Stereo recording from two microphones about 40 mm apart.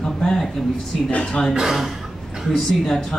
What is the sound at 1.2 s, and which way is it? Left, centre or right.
A woman's voice, centre.